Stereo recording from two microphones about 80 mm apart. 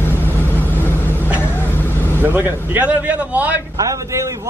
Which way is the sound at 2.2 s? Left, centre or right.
Right.